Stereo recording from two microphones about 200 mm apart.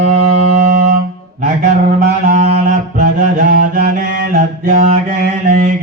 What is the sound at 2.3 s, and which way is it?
Music, 40° right (ahead or behind).